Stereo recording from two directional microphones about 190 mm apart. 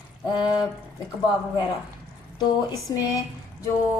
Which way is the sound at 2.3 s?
20° left (ahead or behind).